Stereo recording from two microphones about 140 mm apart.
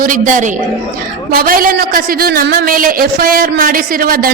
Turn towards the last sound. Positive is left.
turn(degrees=-90)